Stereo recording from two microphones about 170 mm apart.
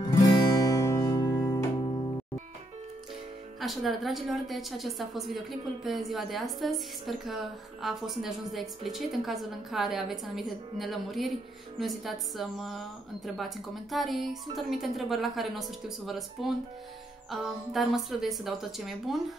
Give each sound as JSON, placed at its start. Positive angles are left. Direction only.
{"t": 0.0, "sound": "music", "side_deg": 20}
{"t": 3.6, "sound": "a woman's voice", "side_deg": 0}